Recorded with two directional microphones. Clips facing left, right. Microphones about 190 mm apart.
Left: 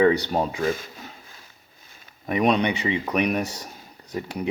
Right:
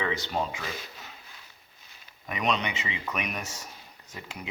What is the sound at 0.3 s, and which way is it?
Speech, 45° left (ahead or behind).